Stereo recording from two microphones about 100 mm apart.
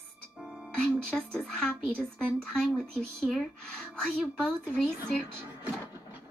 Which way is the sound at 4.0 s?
5° left (ahead or behind).